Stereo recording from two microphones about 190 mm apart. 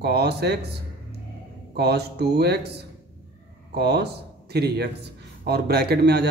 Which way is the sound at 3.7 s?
60° right (ahead or behind).